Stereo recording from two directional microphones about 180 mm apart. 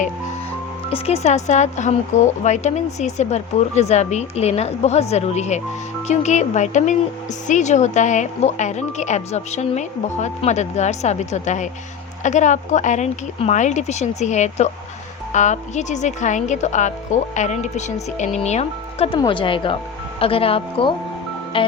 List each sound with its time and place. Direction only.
0.9 s speech: 35° left (ahead or behind)